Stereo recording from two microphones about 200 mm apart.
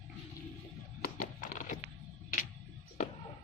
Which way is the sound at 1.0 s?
45° left (ahead or behind).